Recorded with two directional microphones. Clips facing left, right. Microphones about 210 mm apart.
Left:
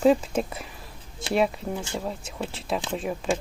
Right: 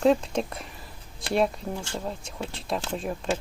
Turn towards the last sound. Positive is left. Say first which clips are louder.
# left 2 dB
turn(degrees=0)  # may be behind; listen again after turning